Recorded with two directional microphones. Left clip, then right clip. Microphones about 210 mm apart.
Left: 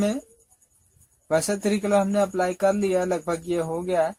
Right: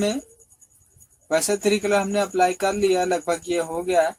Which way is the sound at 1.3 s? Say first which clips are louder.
Right 3 dB; 30° left (ahead or behind).